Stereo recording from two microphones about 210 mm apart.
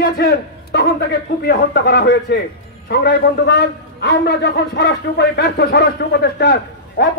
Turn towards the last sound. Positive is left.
turn(degrees=50)  # may be behind; listen again after turning